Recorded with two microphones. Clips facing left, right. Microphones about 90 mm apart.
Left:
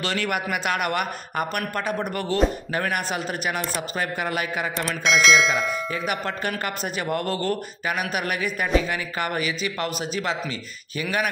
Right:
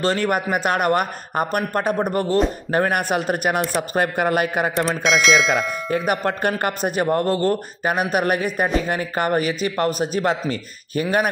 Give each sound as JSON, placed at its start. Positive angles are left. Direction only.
{"t": 0.0, "sound": "a man's voice", "side_deg": -40}
{"t": 5.0, "sound": "speech", "side_deg": 0}
{"t": 5.9, "sound": "speech", "side_deg": -45}